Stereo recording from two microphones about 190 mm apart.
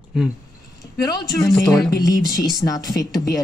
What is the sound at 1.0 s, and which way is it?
Speech, 20° left (ahead or behind).